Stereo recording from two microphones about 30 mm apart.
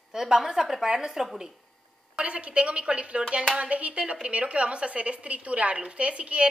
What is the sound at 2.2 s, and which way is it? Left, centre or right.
A woman's voice, right.